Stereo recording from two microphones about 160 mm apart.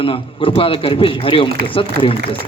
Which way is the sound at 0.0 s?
35° left (ahead or behind).